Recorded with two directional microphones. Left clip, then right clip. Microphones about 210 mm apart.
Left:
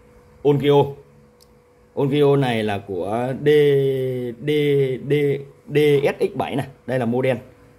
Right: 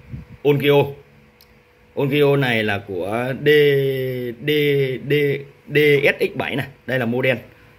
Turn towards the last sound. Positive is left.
turn(degrees=5)  # may be behind; listen again after turning